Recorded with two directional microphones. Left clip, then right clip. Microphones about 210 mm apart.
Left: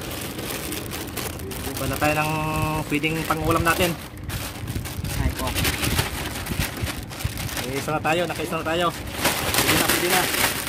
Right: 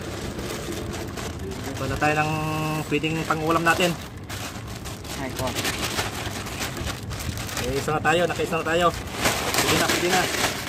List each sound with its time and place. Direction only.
2.0 s speech: 25° left (ahead or behind)
7.5 s speech: 10° left (ahead or behind); by 10.5 s 30° left (ahead or behind)